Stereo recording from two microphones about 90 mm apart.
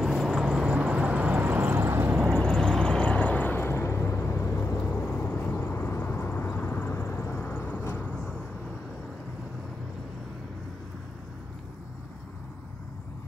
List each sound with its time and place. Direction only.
0.0 s vehicle: 5° right (ahead or behind); by 2.1 s 25° right (ahead or behind)
2.3 s vehicle: 10° left (ahead or behind)